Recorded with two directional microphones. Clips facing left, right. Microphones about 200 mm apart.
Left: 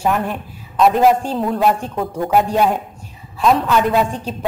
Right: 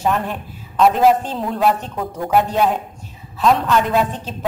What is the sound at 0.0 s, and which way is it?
A woman's voice, centre (ahead or behind).